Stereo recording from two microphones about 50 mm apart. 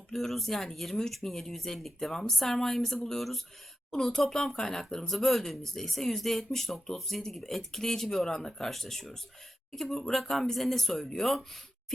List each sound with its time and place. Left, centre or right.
0.1 s speech: centre